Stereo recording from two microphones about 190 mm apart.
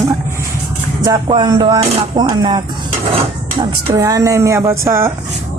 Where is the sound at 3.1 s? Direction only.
25° right (ahead or behind).